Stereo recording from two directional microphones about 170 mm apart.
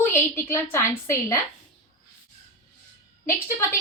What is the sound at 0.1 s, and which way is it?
A woman's voice, 15° left (ahead or behind).